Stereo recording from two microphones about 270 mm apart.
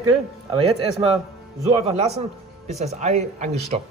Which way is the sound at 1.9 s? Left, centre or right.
Right.